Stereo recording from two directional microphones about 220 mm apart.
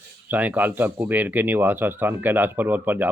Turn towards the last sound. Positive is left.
turn(degrees=-10)  # may be behind; listen again after turning